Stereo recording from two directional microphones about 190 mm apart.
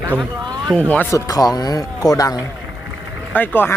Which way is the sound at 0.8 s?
10° left (ahead or behind).